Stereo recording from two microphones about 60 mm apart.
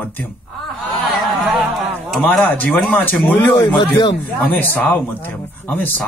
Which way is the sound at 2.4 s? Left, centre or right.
Left.